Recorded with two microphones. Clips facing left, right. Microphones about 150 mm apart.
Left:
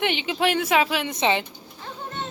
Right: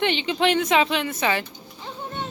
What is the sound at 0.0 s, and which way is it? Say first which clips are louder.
Speech: right 2 dB; 10° left (ahead or behind).